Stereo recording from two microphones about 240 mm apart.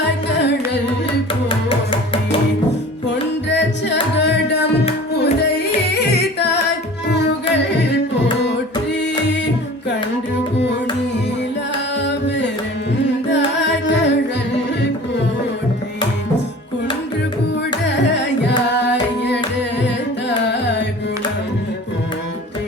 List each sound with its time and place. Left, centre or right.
0.3 s carnatic music: left
1.5 s music: left
3.5 s music: left
5.9 s music: left
7.1 s carnatic music: left
12.0 s music: left
17.8 s carnatic music: left
20.5 s carnatic music: left